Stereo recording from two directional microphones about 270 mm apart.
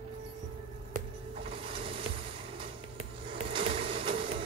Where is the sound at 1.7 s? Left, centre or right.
Centre.